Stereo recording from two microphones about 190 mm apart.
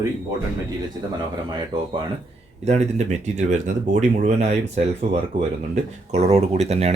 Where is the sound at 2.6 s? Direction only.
35° right (ahead or behind).